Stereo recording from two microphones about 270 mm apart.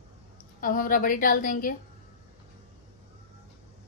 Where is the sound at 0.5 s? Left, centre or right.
Left.